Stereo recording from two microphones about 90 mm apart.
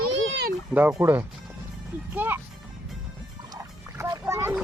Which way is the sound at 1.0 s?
25° right (ahead or behind).